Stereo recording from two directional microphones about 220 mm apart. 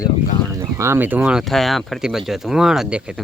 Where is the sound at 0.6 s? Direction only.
10° right (ahead or behind).